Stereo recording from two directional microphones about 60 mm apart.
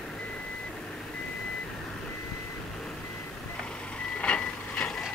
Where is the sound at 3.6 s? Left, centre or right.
Centre.